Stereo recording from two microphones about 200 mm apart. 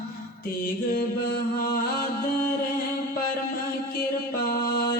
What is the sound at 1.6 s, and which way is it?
Music, 45° left (ahead or behind).